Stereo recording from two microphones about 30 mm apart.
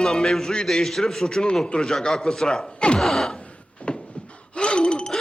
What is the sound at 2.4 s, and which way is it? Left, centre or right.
Speech, left.